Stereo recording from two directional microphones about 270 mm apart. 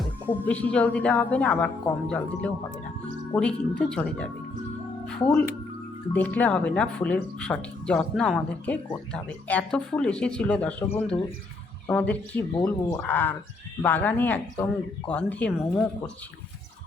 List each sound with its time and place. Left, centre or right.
0.0 s speech: centre
6.1 s speech: centre